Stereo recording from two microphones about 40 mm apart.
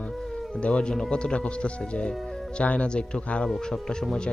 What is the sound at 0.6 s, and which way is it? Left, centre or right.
Speech, left.